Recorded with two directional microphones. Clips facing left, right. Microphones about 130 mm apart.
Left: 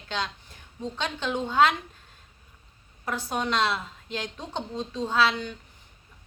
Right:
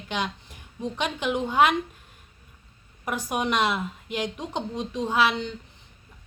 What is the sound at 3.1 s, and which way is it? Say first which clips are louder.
A woman's voice: right 2 dB; 15° right (ahead or behind).